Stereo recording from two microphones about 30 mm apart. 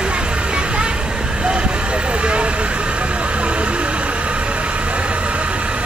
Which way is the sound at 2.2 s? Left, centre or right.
Right.